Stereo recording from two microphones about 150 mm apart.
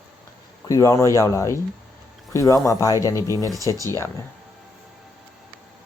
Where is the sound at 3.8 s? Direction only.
20° left (ahead or behind).